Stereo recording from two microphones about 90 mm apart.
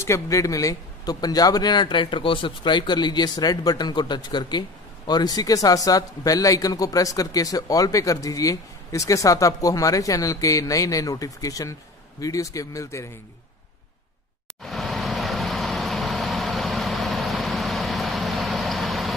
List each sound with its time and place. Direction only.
0.0 s speech: 35° left (ahead or behind)
14.6 s vehicle: 5° left (ahead or behind)